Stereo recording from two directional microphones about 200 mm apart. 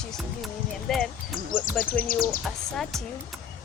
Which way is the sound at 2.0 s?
45° left (ahead or behind).